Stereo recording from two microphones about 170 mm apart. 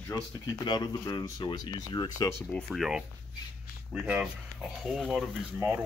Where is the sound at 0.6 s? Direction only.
25° left (ahead or behind).